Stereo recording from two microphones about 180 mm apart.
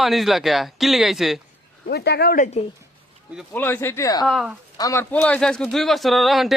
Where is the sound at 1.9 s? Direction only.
65° left (ahead or behind).